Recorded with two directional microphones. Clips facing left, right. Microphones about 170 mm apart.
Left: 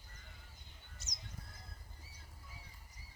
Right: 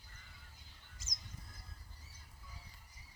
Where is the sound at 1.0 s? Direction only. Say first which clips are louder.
Even; 90° right.